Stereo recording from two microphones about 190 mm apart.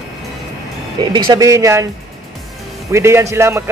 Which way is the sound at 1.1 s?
20° right (ahead or behind).